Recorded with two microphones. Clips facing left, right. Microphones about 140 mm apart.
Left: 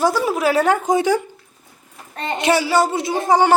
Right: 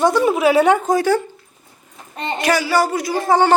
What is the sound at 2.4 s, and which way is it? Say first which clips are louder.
Speech: left 1 dB; 25° left (ahead or behind).